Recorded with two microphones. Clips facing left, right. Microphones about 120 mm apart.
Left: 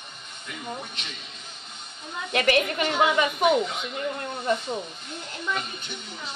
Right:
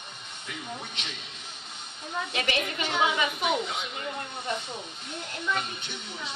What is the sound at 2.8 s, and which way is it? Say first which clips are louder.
Speech: left 4 dB; 50° left (ahead or behind).